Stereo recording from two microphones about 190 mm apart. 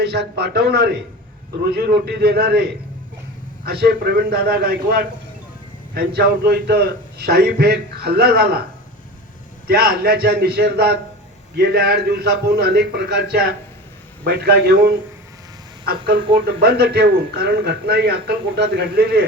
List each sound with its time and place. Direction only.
0.0 s speech: 60° right (ahead or behind)
3.7 s speech: 55° right (ahead or behind)
9.6 s speech: 55° right (ahead or behind)
16.3 s speech: 55° right (ahead or behind)